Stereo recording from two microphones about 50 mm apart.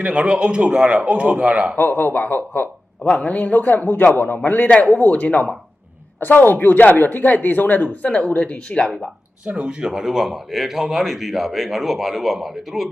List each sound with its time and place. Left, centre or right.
0.0 s speech: right
1.7 s speech: left
3.0 s speech: left
6.1 s speech: left
8.0 s speech: left
8.8 s speech: centre
9.5 s speech: right
9.8 s speech: centre